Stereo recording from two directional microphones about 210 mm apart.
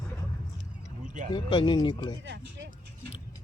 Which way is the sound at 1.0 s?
35° right (ahead or behind).